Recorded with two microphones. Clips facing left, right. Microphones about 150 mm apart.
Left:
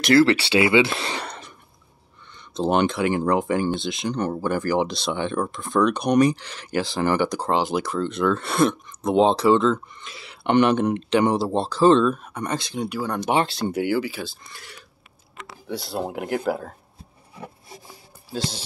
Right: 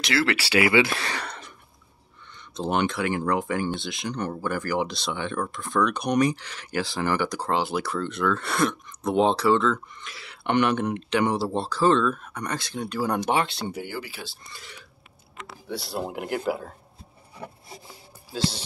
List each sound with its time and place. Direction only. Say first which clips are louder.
0.0 s speech: left 9 dB; 45° left (ahead or behind)
0.3 s speech: left 4 dB; 25° left (ahead or behind)
2.5 s speech: left 4 dB; 30° left (ahead or behind)
13.0 s speech: right 1 dB; 5° right (ahead or behind)
13.7 s speech: left 10 dB; 70° left (ahead or behind)
16.1 s speech: left 3 dB; 45° left (ahead or behind)